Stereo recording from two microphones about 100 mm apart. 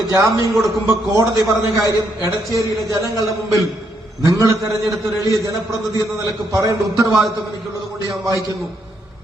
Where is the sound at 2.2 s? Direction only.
30° right (ahead or behind).